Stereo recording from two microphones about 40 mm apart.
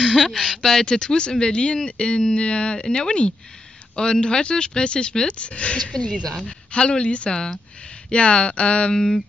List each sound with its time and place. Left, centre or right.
0.0 s speech: centre
0.6 s mantra: centre
0.8 s speech: left
6.2 s mantra: centre
6.7 s speech: left
8.9 s mantra: centre